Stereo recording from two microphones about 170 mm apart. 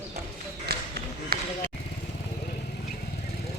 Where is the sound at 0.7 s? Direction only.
70° right (ahead or behind).